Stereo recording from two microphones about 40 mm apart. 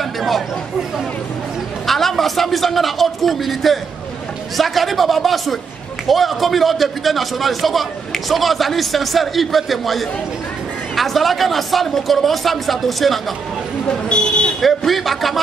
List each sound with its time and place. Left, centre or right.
1.9 s a man's voice: centre
13.8 s buzzer: left
14.9 s a man's voice: centre